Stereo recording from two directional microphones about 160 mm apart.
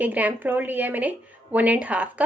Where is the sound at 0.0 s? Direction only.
10° right (ahead or behind).